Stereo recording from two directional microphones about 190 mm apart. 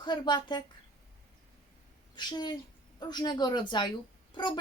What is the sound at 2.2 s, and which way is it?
Speech, 20° left (ahead or behind).